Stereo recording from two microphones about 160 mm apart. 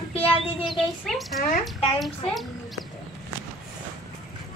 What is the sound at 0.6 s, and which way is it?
A woman's voice, centre (ahead or behind).